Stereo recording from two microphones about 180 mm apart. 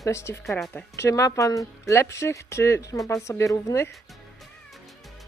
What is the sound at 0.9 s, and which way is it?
Speech, 15° left (ahead or behind).